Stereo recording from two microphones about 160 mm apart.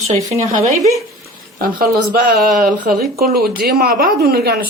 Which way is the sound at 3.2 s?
70° right (ahead or behind).